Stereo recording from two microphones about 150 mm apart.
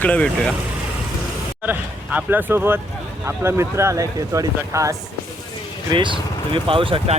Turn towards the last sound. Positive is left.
turn(degrees=-35)  # may be behind; listen again after turning